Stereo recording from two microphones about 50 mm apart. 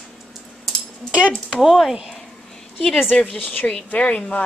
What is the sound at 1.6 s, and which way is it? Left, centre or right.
Speech, centre.